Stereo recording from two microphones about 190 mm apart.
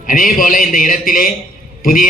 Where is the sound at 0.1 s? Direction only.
45° left (ahead or behind).